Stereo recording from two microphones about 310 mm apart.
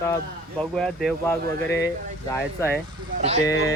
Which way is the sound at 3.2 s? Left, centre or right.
Right.